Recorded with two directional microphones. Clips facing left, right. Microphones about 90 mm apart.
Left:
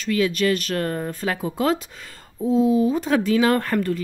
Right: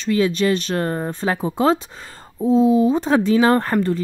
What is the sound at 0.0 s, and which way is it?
Speech, 30° right (ahead or behind).